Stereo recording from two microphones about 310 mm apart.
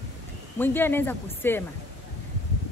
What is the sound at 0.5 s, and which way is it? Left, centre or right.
Speech, centre.